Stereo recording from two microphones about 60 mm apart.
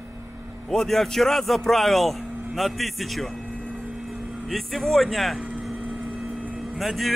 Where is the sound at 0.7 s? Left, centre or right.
Centre.